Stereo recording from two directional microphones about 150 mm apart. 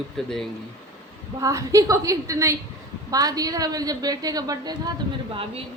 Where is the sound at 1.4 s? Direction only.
20° right (ahead or behind).